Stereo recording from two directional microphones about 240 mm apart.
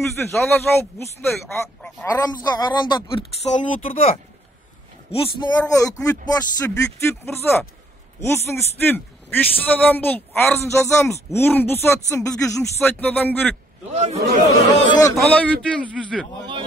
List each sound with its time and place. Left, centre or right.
0.3 s a man's voice: centre
2.1 s speech: centre
5.1 s a man's voice: left
13.9 s a man's voice: right
15.1 s a man's voice: centre